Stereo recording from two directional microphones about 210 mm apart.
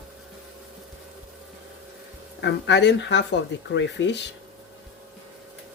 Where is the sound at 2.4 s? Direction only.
55° left (ahead or behind).